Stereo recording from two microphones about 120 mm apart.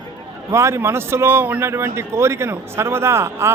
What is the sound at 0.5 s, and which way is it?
A man's voice, 25° right (ahead or behind).